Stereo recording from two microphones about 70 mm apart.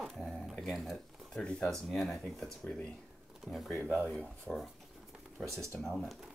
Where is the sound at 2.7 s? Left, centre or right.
Centre.